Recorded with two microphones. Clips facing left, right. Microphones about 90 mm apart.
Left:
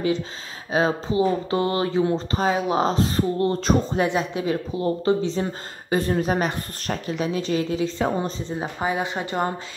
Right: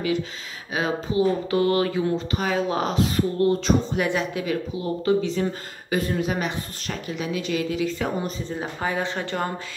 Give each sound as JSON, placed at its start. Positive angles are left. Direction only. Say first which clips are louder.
{"t": 0.7, "sound": "speech", "louder": "left 2 dB", "side_deg": 30}